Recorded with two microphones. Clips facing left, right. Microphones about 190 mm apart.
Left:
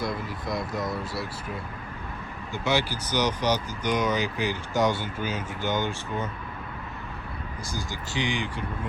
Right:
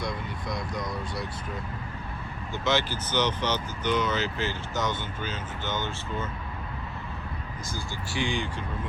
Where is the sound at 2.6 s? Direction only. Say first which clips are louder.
Left 1 dB; 10° left (ahead or behind).